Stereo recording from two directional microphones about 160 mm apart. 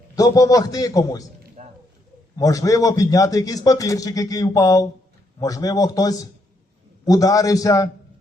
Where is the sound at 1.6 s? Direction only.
45° right (ahead or behind).